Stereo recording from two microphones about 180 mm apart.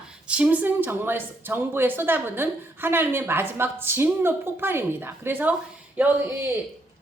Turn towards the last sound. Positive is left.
turn(degrees=-10)  # may be behind; listen again after turning